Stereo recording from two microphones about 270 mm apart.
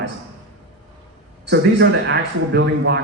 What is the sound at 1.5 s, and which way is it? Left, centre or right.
Speech, right.